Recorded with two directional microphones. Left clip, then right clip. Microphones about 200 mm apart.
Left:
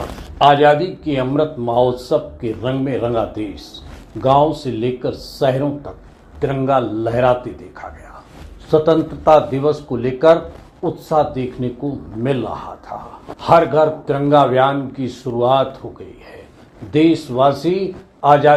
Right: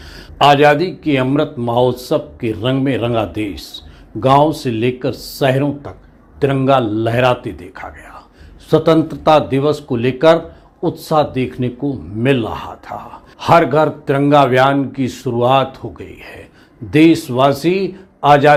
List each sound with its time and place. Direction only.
0.3 s speech: 55° right (ahead or behind)